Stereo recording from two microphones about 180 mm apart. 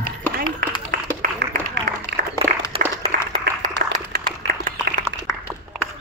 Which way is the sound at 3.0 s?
40° right (ahead or behind).